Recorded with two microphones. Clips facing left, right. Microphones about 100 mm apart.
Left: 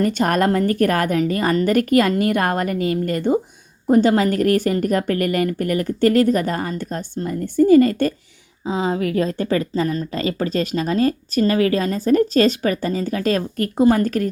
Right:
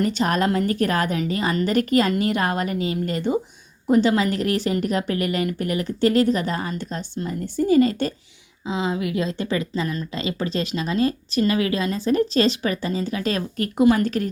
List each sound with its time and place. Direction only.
0.0 s speech: 50° left (ahead or behind)